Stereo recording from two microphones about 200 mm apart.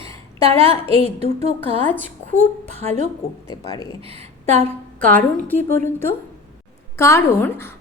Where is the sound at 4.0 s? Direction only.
30° right (ahead or behind).